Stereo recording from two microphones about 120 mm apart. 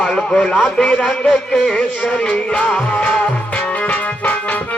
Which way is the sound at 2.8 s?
10° left (ahead or behind).